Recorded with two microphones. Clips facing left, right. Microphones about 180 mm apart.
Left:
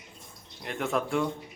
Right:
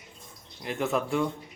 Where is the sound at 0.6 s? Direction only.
Centre (ahead or behind).